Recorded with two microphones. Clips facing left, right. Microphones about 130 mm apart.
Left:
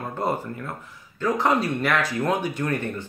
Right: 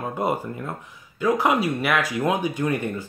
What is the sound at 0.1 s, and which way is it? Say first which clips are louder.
Speech: even; 15° right (ahead or behind).